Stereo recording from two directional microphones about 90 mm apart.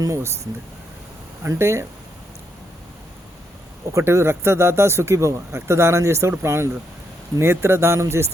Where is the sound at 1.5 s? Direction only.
30° right (ahead or behind).